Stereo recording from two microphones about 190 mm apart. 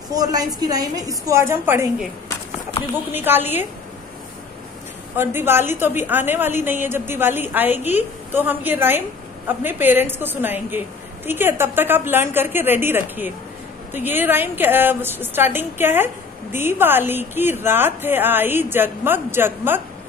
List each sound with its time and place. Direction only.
0.1 s a woman's voice: 20° right (ahead or behind)
2.7 s speech: 30° left (ahead or behind)
3.2 s a woman's voice: 10° right (ahead or behind)
5.1 s a woman's voice: 10° right (ahead or behind)